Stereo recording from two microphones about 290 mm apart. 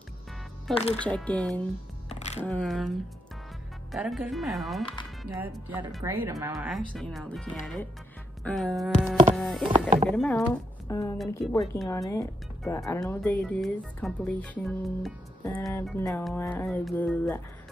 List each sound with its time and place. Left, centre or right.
0.9 s speech: centre
2.0 s music: left
2.4 s speech: centre
3.9 s speech: centre